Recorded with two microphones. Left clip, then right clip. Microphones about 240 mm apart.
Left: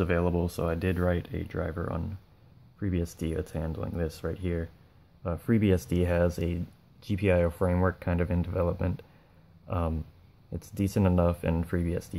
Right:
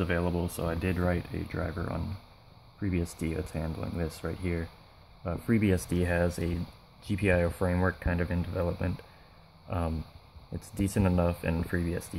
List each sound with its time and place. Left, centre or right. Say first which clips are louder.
0.0 s speech: left 3 dB; centre